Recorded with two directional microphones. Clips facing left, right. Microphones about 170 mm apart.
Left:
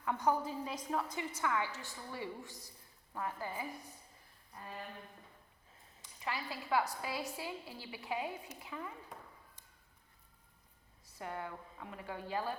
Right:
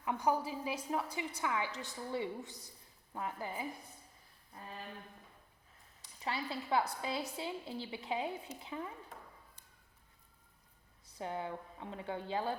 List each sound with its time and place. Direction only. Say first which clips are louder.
0.0 s a woman's voice: even; 15° right (ahead or behind)
6.2 s a woman's voice: right 2 dB; 30° right (ahead or behind)
11.2 s a woman's voice: right 3 dB; 20° right (ahead or behind)